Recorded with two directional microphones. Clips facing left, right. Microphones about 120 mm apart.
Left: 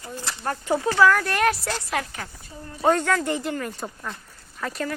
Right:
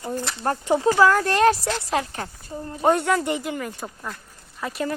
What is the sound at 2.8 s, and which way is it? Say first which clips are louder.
Speech: right 1 dB; 15° right (ahead or behind).